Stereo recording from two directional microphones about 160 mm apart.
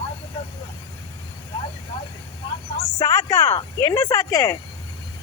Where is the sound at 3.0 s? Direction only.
20° left (ahead or behind).